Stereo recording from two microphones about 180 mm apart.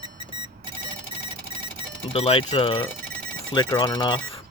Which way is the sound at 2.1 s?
35° left (ahead or behind).